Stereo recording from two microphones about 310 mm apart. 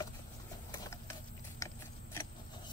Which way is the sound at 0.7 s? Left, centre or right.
Centre.